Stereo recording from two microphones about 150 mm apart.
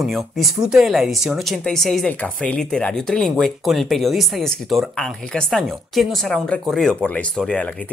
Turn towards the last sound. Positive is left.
turn(degrees=10)  # may be behind; listen again after turning